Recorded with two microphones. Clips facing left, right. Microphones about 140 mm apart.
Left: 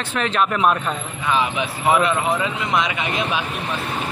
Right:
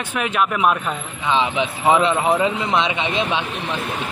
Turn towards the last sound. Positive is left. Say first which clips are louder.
# right 2 dB
turn(degrees=-30)  # may be behind; listen again after turning